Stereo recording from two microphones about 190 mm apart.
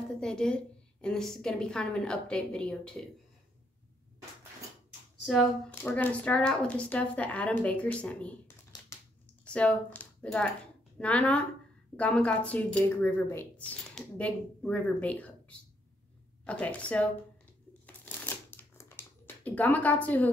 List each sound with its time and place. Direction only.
0.2 s a woman's voice: 5° left (ahead or behind)
5.2 s a woman's voice: centre (ahead or behind)
5.8 s speech: 10° left (ahead or behind)
8.8 s a sound: 10° left (ahead or behind)
11.0 s a woman's voice: 5° left (ahead or behind)
17.8 s shuffling cards: 10° left (ahead or behind)